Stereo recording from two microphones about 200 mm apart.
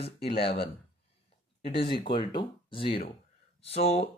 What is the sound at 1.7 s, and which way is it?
Speech, 25° left (ahead or behind).